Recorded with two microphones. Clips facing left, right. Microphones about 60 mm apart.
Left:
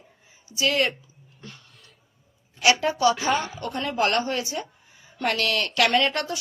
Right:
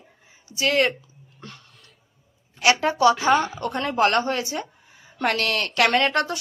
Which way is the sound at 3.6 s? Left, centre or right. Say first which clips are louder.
Right 3 dB; right.